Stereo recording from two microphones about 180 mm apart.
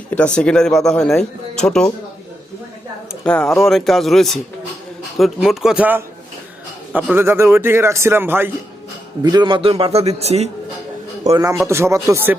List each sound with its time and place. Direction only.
0.1 s speech: 5° left (ahead or behind)
3.2 s a man's voice: 5° left (ahead or behind); by 8.4 s 10° right (ahead or behind)
9.2 s a man's voice: 25° right (ahead or behind)
11.3 s a man's voice: 20° right (ahead or behind)